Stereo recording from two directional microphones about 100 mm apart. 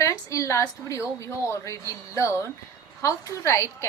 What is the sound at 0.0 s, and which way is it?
A woman's voice, 30° left (ahead or behind).